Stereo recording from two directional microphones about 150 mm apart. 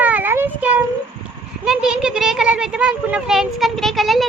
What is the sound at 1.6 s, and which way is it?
A child's voice, 5° right (ahead or behind).